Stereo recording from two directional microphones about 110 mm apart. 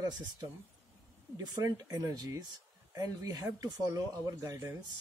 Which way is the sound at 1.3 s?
35° right (ahead or behind).